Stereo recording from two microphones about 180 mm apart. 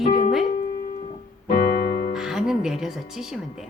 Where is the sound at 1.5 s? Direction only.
60° left (ahead or behind).